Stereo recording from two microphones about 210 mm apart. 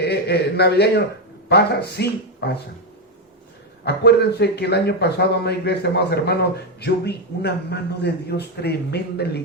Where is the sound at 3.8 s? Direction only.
50° left (ahead or behind).